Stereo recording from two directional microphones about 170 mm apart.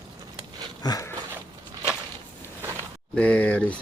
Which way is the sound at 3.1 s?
10° left (ahead or behind).